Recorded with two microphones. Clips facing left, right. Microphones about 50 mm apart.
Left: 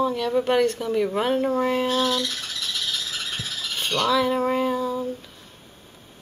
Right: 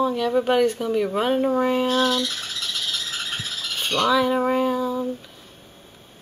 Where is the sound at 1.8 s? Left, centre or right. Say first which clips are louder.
Right 2 dB; right.